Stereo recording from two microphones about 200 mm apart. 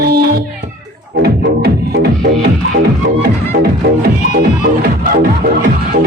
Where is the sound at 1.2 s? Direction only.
50° right (ahead or behind).